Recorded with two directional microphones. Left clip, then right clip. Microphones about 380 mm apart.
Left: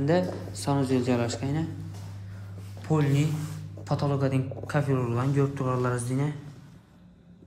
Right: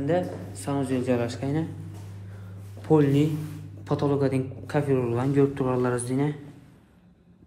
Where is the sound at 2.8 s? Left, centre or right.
Centre.